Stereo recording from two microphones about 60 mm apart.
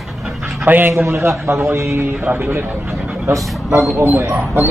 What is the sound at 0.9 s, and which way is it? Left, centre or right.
A man's voice, right.